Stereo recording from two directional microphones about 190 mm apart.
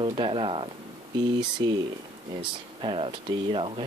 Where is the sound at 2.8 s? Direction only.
30° right (ahead or behind).